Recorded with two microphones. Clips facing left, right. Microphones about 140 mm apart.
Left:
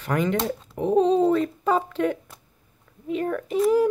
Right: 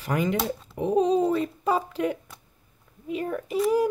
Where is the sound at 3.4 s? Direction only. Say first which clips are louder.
Left 3 dB; 5° right (ahead or behind).